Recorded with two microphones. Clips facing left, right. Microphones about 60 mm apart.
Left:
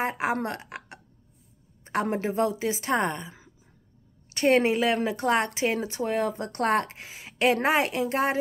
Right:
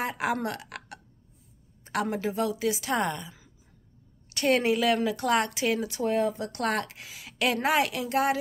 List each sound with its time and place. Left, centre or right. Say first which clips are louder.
0.0 s a woman's voice: left 2 dB; left